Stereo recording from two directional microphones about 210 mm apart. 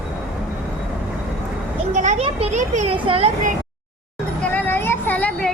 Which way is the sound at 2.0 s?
30° right (ahead or behind).